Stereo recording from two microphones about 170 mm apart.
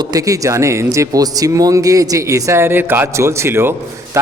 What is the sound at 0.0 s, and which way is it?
Speech, 20° right (ahead or behind).